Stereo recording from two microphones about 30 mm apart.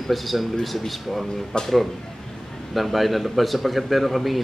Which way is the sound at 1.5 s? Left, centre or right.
Left.